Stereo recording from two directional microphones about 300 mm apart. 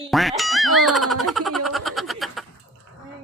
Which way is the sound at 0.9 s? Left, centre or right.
Centre.